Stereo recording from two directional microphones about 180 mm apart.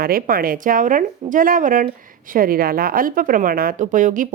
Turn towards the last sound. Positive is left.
turn(degrees=-45)  # may be behind; listen again after turning